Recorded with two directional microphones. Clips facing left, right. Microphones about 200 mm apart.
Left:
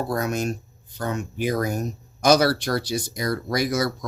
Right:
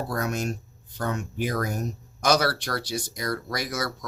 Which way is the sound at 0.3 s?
15° left (ahead or behind).